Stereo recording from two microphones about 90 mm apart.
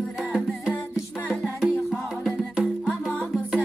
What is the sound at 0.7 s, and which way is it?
Music, 15° left (ahead or behind).